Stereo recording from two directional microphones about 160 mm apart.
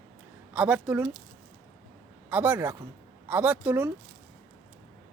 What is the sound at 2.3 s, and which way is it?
Speech, 10° right (ahead or behind).